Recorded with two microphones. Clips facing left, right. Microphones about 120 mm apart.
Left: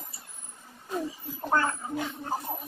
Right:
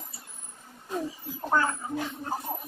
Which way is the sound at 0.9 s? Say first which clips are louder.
Even; 5° right (ahead or behind).